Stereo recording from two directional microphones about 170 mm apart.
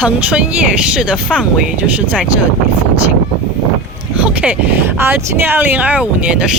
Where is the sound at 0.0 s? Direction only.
5° right (ahead or behind).